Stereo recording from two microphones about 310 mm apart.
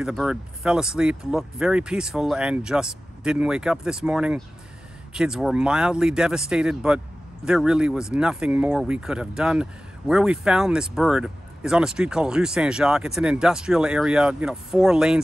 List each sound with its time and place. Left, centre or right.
0.0 s speech: centre